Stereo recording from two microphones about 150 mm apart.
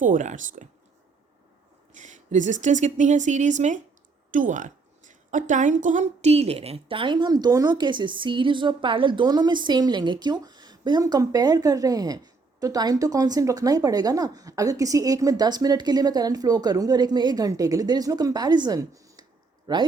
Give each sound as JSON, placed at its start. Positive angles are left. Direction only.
{"t": 0.0, "sound": "speech", "side_deg": -55}
{"t": 1.9, "sound": "a woman's voice", "side_deg": -55}